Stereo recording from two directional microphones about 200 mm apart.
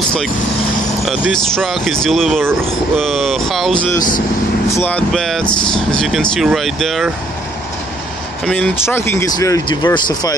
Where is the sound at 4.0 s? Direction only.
45° left (ahead or behind).